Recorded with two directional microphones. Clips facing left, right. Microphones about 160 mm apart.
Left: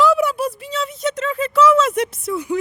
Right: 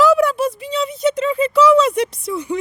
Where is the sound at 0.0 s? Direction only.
Centre (ahead or behind).